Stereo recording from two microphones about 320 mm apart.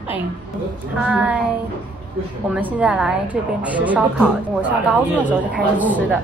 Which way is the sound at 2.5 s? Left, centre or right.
Centre.